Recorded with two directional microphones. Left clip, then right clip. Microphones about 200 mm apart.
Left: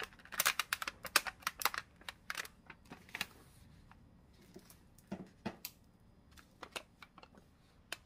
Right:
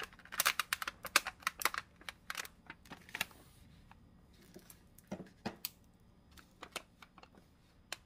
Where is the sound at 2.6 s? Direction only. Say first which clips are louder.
Right 3 dB; 25° right (ahead or behind).